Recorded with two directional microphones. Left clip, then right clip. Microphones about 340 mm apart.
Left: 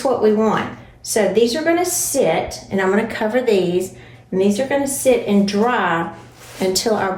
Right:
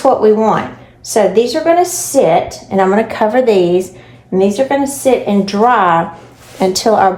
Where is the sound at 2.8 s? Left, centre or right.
Centre.